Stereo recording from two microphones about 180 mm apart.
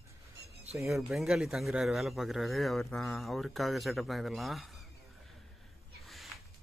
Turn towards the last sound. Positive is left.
turn(degrees=0)  # may be behind; listen again after turning